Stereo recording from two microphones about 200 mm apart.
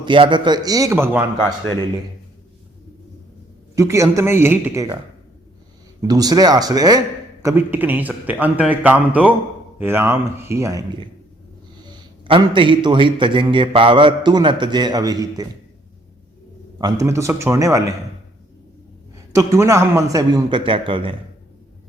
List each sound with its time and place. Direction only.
0.0 s a man's voice: 25° right (ahead or behind)
3.8 s a man's voice: 15° right (ahead or behind)
6.1 s a man's voice: 20° right (ahead or behind)
11.9 s a man's voice: 20° right (ahead or behind)
16.7 s a man's voice: 15° right (ahead or behind)
19.1 s a man's voice: 15° right (ahead or behind)